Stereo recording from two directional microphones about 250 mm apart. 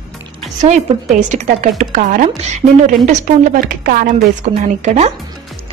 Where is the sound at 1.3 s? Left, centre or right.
Right.